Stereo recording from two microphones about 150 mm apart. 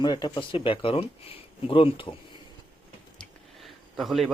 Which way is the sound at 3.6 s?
Centre (ahead or behind).